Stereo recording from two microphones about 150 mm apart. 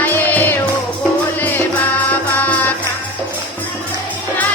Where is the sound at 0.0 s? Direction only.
15° left (ahead or behind).